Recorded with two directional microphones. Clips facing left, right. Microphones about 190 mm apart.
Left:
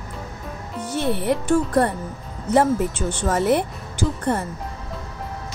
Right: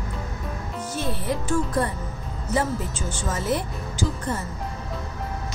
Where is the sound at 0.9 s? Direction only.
65° left (ahead or behind).